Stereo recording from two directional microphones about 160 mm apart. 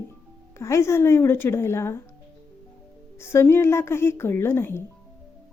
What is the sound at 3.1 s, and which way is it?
A woman's voice, 15° left (ahead or behind).